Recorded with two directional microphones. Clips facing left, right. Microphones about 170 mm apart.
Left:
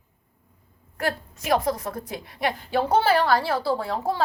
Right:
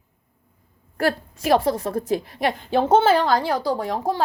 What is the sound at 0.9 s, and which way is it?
A woman's voice, 30° right (ahead or behind).